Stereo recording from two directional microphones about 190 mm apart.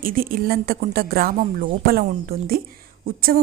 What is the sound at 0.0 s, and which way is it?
A woman's voice, 50° right (ahead or behind).